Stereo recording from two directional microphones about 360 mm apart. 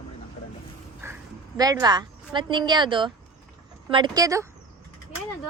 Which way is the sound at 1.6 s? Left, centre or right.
Centre.